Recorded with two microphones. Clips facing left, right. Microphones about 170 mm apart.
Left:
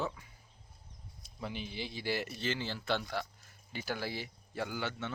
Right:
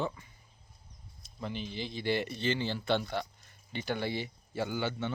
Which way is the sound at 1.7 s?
10° left (ahead or behind).